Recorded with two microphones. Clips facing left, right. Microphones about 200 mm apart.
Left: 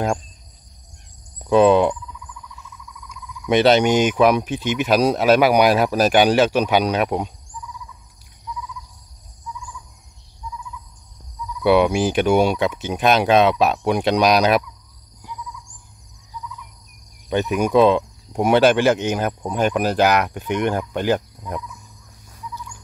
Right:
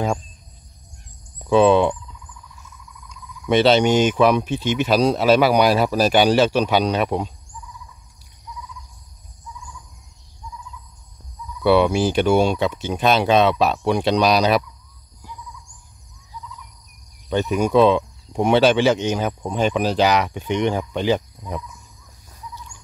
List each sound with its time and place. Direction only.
1.5 s speech: 10° left (ahead or behind)
3.4 s speech: 15° left (ahead or behind)
11.6 s speech: 15° left (ahead or behind)
17.3 s speech: 10° left (ahead or behind)
18.6 s speech: 55° left (ahead or behind)
19.0 s speech: 10° left (ahead or behind)